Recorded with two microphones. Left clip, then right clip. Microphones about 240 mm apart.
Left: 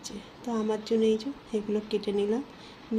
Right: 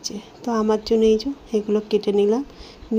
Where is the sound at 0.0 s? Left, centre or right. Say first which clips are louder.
Right 9 dB; right.